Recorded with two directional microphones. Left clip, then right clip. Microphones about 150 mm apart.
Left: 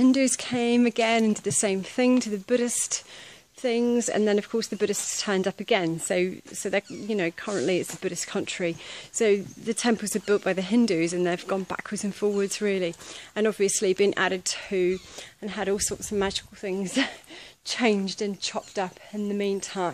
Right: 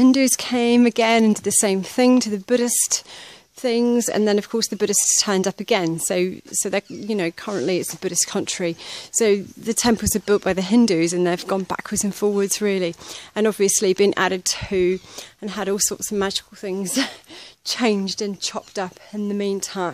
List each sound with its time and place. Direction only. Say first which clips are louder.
0.0 s speech: right 5 dB; 55° right (ahead or behind)